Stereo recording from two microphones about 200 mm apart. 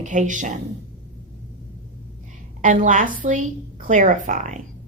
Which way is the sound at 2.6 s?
40° right (ahead or behind).